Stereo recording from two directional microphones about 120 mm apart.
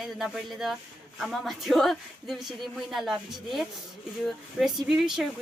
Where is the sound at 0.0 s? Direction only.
Centre (ahead or behind).